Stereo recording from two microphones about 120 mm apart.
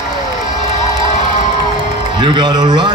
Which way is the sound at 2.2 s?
40° right (ahead or behind).